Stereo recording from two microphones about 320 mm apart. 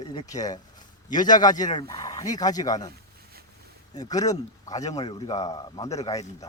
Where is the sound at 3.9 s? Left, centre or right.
Centre.